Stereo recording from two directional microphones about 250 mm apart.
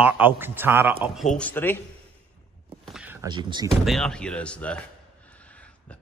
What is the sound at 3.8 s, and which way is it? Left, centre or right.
Speech, centre.